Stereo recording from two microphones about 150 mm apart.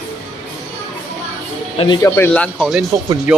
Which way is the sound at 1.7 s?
35° left (ahead or behind).